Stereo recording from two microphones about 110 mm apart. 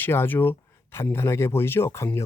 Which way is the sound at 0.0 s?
20° left (ahead or behind).